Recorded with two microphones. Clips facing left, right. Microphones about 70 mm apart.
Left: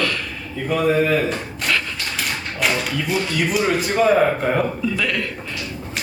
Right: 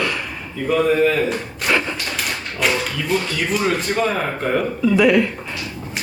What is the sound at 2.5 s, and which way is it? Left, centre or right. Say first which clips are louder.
Speech: right 1 dB; centre.